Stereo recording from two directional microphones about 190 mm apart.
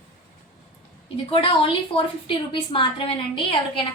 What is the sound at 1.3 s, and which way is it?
A woman's voice, 30° left (ahead or behind).